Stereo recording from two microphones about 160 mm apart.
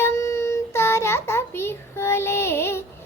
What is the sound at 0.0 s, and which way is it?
Child singing, 20° left (ahead or behind).